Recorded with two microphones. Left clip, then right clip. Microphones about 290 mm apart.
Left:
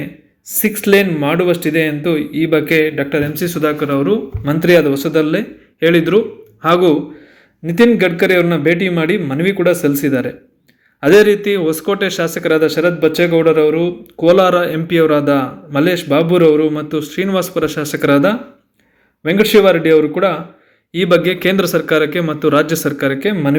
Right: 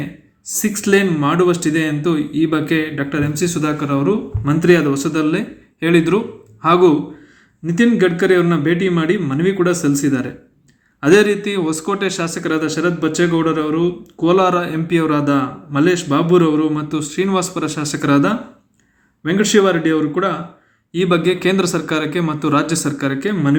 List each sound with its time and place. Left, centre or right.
0.4 s speech: centre